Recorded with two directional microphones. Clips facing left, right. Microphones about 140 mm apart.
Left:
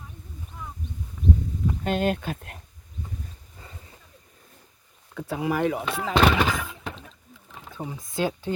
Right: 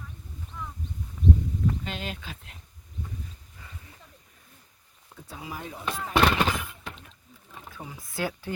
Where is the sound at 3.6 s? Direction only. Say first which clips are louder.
Left 2 dB; 30° left (ahead or behind).